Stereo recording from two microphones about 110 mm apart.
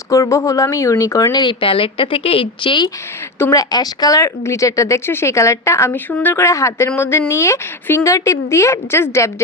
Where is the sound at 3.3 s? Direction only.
25° left (ahead or behind).